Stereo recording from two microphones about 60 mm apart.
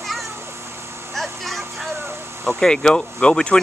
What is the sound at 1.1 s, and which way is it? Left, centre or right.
Vehicle, centre.